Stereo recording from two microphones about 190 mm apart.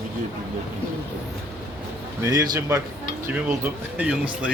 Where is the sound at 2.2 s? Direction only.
20° right (ahead or behind).